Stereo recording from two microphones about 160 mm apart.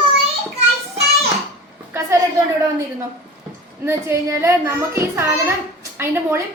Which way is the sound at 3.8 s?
15° right (ahead or behind).